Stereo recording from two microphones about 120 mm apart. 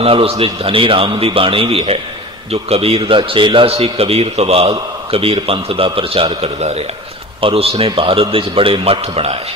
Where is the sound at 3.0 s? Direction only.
45° right (ahead or behind).